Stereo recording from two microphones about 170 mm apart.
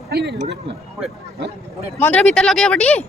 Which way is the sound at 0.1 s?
75° right (ahead or behind).